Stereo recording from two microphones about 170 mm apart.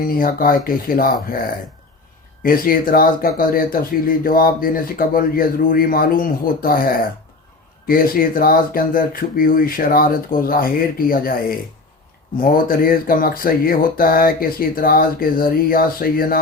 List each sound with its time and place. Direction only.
0.0 s speech: 55° left (ahead or behind)
2.4 s speech: 55° left (ahead or behind)